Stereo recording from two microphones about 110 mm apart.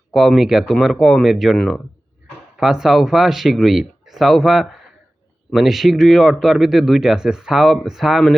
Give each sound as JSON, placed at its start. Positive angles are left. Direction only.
{"t": 0.1, "sound": "speech", "side_deg": 0}